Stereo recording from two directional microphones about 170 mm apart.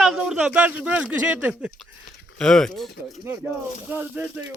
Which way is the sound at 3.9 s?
10° right (ahead or behind).